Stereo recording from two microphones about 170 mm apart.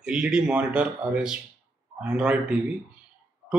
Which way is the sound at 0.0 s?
5° right (ahead or behind).